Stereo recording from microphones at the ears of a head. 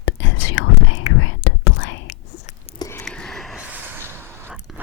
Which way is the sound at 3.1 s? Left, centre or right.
Centre.